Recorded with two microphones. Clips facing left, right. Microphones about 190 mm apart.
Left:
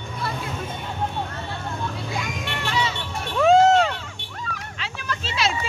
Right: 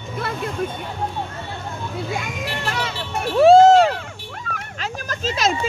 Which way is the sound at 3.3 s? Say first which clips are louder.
Right 5 dB; 35° right (ahead or behind).